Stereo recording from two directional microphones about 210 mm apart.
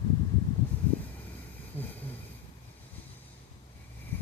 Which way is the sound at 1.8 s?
10° left (ahead or behind).